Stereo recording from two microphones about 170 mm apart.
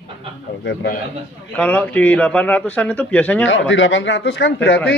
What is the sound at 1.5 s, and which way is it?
A man's voice, 10° left (ahead or behind).